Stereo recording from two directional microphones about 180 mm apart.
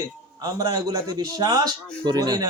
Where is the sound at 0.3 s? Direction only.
20° right (ahead or behind).